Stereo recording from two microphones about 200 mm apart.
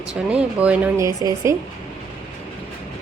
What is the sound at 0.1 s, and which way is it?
Speech, 5° right (ahead or behind).